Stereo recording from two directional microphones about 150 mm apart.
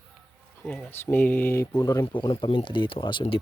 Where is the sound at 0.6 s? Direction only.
5° left (ahead or behind); by 3.3 s 30° left (ahead or behind).